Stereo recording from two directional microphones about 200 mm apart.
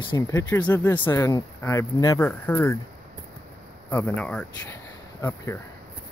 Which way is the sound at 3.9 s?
10° left (ahead or behind).